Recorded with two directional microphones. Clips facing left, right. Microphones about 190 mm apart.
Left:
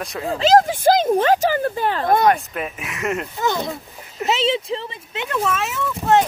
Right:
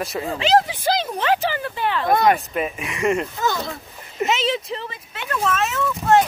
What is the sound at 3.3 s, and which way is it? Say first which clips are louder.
Speech: left 2 dB; 20° left (ahead or behind).